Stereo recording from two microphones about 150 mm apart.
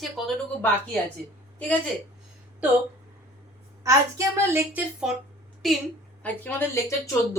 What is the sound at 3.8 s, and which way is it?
A woman's voice, 20° right (ahead or behind).